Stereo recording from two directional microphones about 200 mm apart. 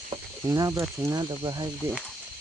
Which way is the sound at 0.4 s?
15° right (ahead or behind).